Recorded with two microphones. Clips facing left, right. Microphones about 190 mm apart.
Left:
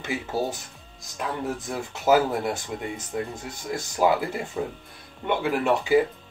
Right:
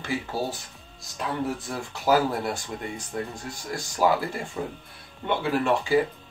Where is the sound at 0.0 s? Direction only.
20° left (ahead or behind).